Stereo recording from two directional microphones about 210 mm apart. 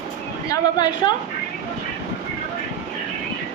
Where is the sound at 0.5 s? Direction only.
20° left (ahead or behind).